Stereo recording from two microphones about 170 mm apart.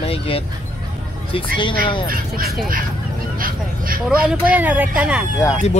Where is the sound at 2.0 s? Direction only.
55° right (ahead or behind).